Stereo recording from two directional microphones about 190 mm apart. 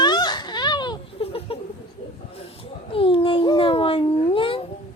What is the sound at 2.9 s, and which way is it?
Cat, 30° left (ahead or behind).